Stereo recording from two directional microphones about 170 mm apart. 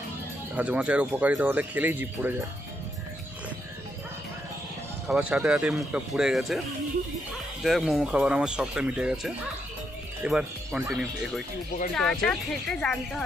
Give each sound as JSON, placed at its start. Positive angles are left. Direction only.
{"t": 0.6, "sound": "speech", "side_deg": -10}
{"t": 5.0, "sound": "speech", "side_deg": -5}
{"t": 7.6, "sound": "speech", "side_deg": 0}